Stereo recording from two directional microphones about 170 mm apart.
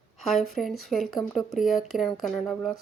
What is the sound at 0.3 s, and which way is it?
Speech, centre (ahead or behind).